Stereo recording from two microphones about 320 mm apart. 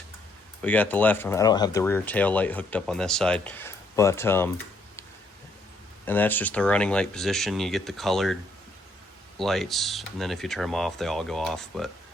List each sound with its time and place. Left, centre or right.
0.6 s speech: centre
6.1 s speech: centre
9.4 s speech: centre